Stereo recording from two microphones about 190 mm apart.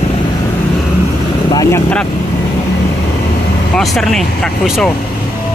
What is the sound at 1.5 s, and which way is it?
Vehicle, 20° left (ahead or behind).